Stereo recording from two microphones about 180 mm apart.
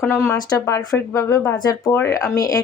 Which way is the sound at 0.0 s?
15° left (ahead or behind).